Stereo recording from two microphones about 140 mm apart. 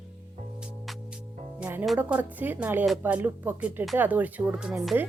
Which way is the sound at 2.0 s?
10° right (ahead or behind).